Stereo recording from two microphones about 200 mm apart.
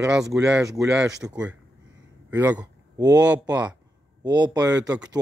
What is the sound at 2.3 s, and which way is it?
Speech, 10° right (ahead or behind).